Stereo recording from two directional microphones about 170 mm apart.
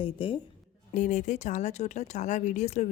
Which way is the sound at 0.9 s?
50° left (ahead or behind).